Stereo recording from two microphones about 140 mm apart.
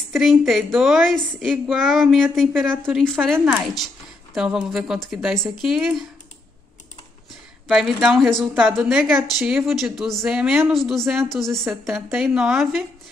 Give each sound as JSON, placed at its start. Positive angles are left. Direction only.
{"t": 0.1, "sound": "a woman's voice", "side_deg": 0}
{"t": 7.6, "sound": "a woman's voice", "side_deg": 0}